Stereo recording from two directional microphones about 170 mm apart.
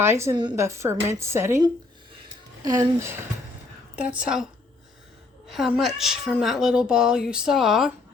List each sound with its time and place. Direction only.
0.0 s speech: 15° right (ahead or behind)
2.6 s speech: 15° right (ahead or behind)
3.9 s speech: 5° right (ahead or behind)
5.5 s a woman's voice: centre (ahead or behind)